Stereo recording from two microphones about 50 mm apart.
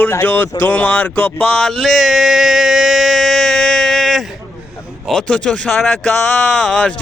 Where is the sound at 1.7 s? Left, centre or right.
Centre.